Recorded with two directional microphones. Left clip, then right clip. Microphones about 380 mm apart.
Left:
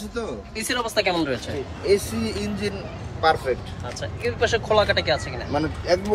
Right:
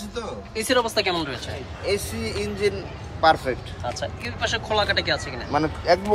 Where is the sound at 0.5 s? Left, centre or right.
Centre.